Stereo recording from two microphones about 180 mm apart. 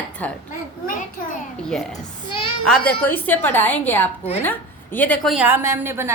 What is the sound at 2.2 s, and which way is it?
Speech, 30° left (ahead or behind).